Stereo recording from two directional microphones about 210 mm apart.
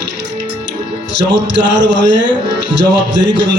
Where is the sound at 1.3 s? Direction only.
55° right (ahead or behind).